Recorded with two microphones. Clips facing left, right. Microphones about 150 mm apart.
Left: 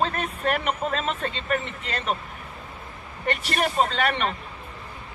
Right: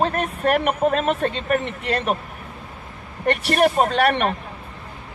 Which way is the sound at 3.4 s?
55° right (ahead or behind).